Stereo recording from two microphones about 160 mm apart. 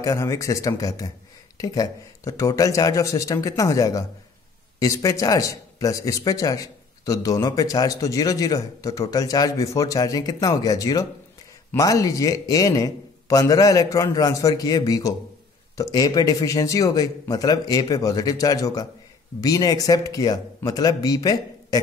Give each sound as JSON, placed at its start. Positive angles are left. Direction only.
{"t": 0.0, "sound": "speech", "side_deg": 20}